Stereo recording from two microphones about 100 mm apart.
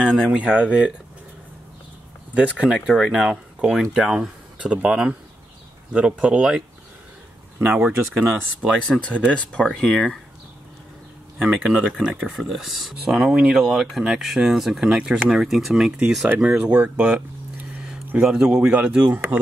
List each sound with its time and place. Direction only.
0.0 s speech: 10° left (ahead or behind)
0.3 s a man's voice: 15° right (ahead or behind)
2.3 s a man's voice: 15° right (ahead or behind)
7.6 s a man's voice: 20° right (ahead or behind)
8.9 s speech: 10° left (ahead or behind)
11.5 s a man's voice: 10° right (ahead or behind)